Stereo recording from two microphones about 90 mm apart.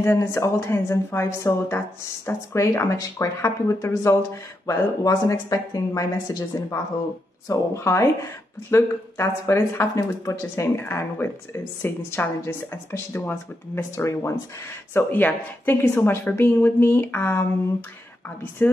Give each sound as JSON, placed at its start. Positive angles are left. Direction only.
{"t": 0.0, "sound": "a woman's voice", "side_deg": 25}
{"t": 4.6, "sound": "a woman's voice", "side_deg": 45}
{"t": 15.0, "sound": "speech", "side_deg": 20}
{"t": 18.6, "sound": "speech", "side_deg": 25}